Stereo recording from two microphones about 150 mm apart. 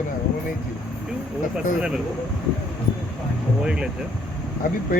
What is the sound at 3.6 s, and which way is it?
Speech, 5° right (ahead or behind).